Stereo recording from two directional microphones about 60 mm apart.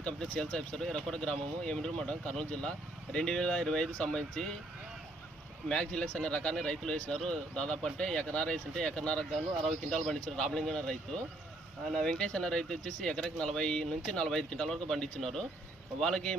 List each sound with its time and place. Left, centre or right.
0.0 s speech: centre
5.6 s speech: centre